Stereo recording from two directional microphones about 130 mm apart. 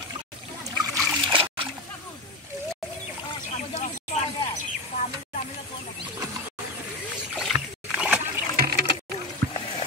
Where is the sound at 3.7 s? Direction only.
60° left (ahead or behind).